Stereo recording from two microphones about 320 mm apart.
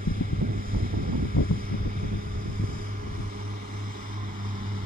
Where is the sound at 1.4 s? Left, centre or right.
Left.